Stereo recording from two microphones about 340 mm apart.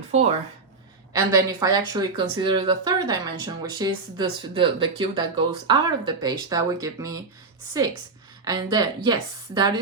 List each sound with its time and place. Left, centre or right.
0.1 s speech: centre
8.4 s speech: centre